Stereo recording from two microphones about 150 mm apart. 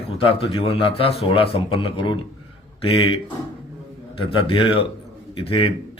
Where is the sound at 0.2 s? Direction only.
40° left (ahead or behind).